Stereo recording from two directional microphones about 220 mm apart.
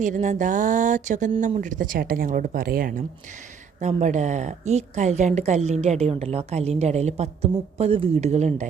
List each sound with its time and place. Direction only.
0.0 s a woman's voice: 35° right (ahead or behind)